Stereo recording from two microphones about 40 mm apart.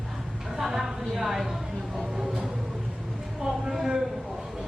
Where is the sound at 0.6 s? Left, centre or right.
Centre.